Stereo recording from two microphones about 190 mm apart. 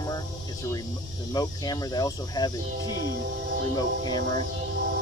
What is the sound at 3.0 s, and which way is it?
Speech, 55° right (ahead or behind).